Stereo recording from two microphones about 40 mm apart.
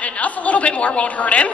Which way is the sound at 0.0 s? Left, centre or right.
Left.